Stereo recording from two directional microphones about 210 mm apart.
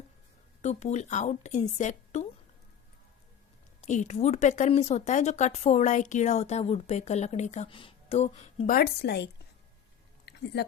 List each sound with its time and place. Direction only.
0.6 s speech: 30° left (ahead or behind)
3.8 s speech: 35° left (ahead or behind); by 9.3 s 55° left (ahead or behind)
10.2 s a sound: 50° left (ahead or behind)